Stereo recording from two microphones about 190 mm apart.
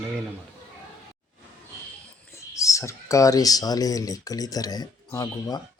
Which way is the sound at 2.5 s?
15° left (ahead or behind).